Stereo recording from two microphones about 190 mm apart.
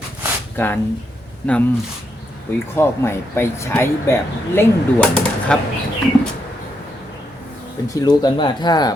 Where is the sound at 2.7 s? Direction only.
15° left (ahead or behind).